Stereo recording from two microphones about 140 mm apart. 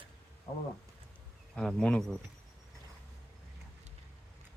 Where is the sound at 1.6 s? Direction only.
5° left (ahead or behind).